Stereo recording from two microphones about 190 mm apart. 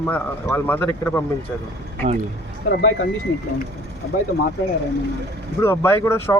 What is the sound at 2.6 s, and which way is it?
Speech, 60° left (ahead or behind).